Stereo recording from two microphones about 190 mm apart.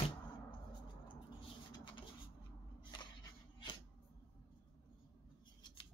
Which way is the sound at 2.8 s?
25° left (ahead or behind).